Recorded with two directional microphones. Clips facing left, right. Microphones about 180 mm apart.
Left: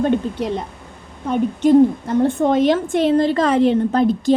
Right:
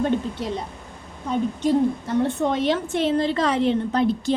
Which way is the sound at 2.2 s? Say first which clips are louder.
Left 8 dB; 50° left (ahead or behind).